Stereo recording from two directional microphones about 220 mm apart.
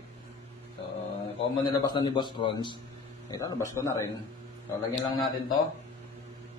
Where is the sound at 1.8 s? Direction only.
20° left (ahead or behind).